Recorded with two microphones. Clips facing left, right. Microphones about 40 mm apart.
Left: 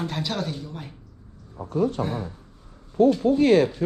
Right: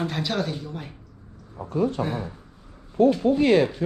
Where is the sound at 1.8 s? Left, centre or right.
Right.